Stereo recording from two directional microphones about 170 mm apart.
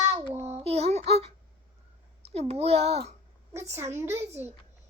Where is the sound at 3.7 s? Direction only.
15° right (ahead or behind).